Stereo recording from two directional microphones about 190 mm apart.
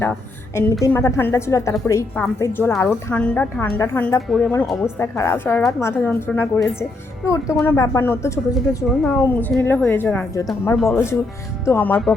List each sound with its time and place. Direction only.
0.0 s a woman's voice: 15° left (ahead or behind)
4.9 s a woman's voice: 15° left (ahead or behind)
7.6 s a woman's voice: 10° left (ahead or behind)